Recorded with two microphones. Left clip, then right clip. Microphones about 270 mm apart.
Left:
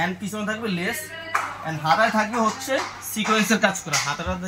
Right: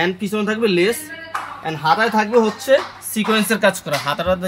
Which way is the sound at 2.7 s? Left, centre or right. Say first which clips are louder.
Right 9 dB; right.